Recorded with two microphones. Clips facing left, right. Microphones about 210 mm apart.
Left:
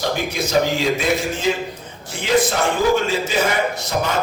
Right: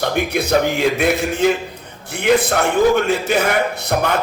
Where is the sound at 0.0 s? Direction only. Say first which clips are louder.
Right 3 dB; 60° right (ahead or behind).